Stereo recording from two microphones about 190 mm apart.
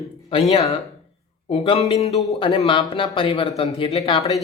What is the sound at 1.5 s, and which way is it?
A man's voice, 30° left (ahead or behind).